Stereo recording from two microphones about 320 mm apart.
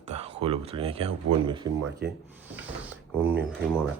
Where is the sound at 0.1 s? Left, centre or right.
Centre.